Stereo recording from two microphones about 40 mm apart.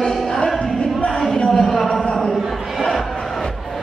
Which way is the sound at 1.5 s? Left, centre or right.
Centre.